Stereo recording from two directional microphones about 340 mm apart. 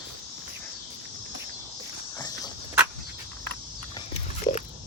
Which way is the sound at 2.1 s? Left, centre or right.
Centre.